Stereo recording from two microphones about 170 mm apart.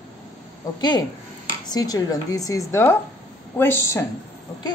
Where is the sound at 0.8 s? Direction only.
25° left (ahead or behind).